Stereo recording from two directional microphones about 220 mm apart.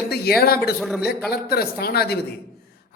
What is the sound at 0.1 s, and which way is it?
Speech, 45° left (ahead or behind).